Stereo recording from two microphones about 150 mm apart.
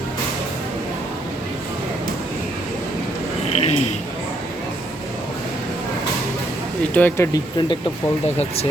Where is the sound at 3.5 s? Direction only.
50° left (ahead or behind).